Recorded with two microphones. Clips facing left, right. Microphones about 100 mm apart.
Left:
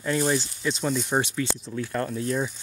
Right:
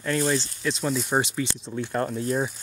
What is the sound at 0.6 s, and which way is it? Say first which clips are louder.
Speech: even; centre (ahead or behind).